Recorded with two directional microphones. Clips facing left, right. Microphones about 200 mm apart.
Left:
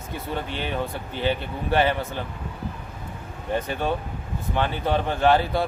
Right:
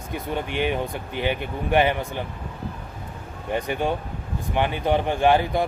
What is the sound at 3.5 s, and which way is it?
A man's voice, 15° right (ahead or behind).